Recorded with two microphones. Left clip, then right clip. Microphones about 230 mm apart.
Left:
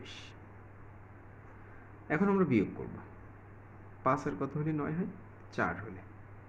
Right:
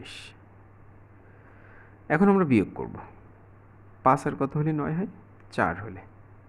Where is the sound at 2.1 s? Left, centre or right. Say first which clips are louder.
Right 8 dB; right.